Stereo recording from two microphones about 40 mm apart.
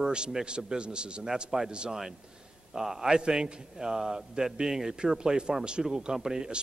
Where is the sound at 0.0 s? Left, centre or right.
Centre.